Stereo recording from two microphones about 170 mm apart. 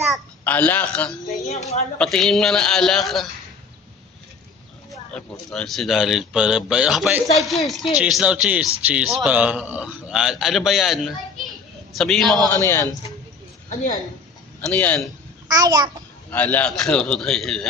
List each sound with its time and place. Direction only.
0.4 s a man's voice: 10° left (ahead or behind)
1.5 s a woman's voice: 40° left (ahead or behind)
2.0 s speech: centre (ahead or behind)
4.9 s speech: 5° left (ahead or behind)
12.5 s a man's voice: 20° left (ahead or behind)
14.7 s a man's voice: 10° left (ahead or behind)
15.4 s a child's voice: 25° right (ahead or behind)
16.3 s speech: 10° left (ahead or behind)